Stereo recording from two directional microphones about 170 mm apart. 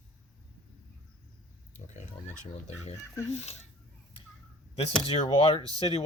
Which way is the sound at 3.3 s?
40° left (ahead or behind).